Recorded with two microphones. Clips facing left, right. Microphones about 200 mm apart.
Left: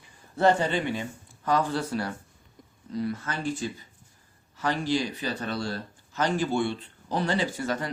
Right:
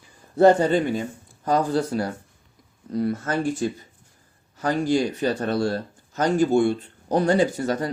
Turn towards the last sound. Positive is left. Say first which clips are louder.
# right 6 dB
turn(degrees=-35)  # may be behind; listen again after turning